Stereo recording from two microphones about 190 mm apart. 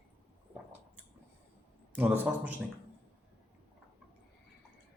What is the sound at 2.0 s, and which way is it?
Speech, 10° right (ahead or behind).